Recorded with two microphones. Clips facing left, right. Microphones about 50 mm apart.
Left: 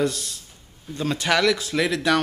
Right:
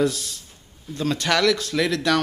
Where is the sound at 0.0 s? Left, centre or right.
Centre.